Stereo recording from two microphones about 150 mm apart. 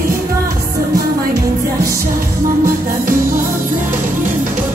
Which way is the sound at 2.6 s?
70° right (ahead or behind).